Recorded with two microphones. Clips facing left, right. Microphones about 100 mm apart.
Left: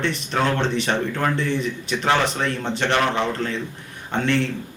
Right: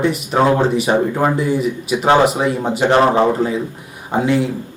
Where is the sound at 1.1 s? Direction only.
20° right (ahead or behind).